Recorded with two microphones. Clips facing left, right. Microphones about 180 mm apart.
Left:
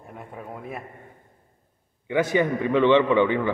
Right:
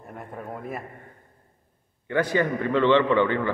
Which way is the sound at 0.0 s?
Centre (ahead or behind).